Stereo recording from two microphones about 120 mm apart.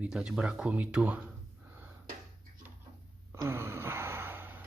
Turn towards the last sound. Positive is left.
turn(degrees=-15)  # may be behind; listen again after turning